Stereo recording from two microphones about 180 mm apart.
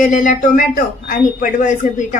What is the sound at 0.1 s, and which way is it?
A woman's voice, 45° left (ahead or behind).